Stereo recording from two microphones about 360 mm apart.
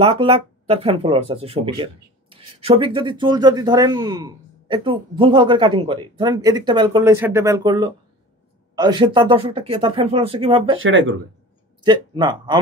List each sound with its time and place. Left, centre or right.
0.0 s speech: centre
10.8 s speech: right
11.8 s speech: centre